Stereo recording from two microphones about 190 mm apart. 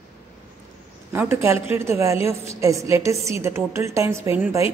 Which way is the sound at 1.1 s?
10° right (ahead or behind).